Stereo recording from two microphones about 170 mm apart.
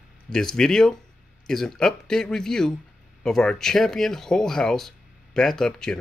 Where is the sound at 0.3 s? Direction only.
5° left (ahead or behind).